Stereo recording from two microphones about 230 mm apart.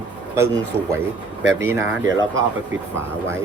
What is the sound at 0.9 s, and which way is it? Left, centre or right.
Speech, centre.